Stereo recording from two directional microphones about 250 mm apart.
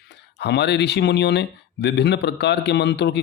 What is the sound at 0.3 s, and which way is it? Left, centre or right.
Speech, left.